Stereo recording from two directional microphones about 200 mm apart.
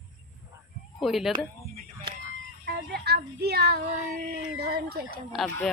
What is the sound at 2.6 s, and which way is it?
Child singing, 50° right (ahead or behind).